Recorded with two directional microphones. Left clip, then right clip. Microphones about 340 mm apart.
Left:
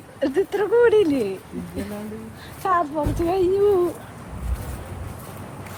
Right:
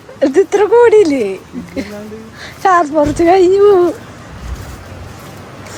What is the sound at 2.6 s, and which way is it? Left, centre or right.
Speech, centre.